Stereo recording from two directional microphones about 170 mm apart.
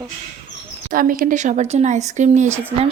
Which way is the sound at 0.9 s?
55° right (ahead or behind).